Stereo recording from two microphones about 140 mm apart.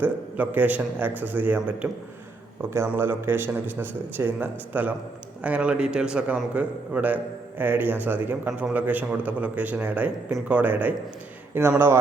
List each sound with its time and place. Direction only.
0.0 s a man's voice: 10° right (ahead or behind)